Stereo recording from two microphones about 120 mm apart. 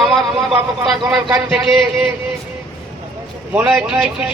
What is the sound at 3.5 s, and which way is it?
Speech, 15° right (ahead or behind).